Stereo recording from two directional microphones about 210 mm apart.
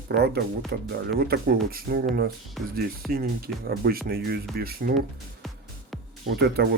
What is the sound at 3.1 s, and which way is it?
Speech, 45° right (ahead or behind).